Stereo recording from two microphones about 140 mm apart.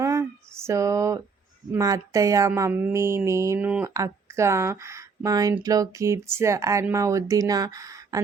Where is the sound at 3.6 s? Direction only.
10° right (ahead or behind).